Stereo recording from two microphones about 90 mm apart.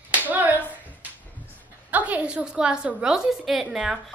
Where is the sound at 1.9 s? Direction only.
15° right (ahead or behind).